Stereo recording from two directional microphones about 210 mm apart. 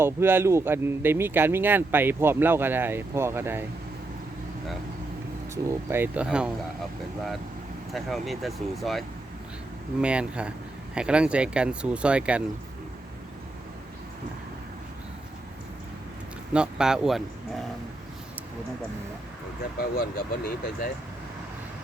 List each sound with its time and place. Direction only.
0.0 s speech: 10° right (ahead or behind)
5.6 s speech: 10° right (ahead or behind)
7.9 s speech: centre (ahead or behind)
16.5 s speech: 5° right (ahead or behind)
20.0 s speech: 45° left (ahead or behind)